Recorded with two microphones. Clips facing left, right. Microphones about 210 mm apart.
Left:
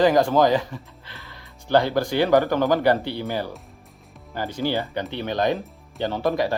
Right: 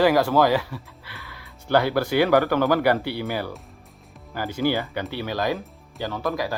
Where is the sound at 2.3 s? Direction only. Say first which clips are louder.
Left 3 dB; 15° left (ahead or behind).